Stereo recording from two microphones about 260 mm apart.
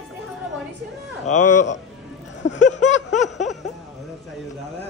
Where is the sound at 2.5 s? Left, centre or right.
Left.